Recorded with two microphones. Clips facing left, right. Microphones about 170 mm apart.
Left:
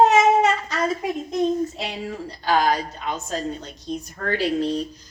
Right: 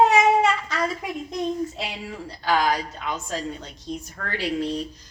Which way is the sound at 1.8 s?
40° left (ahead or behind).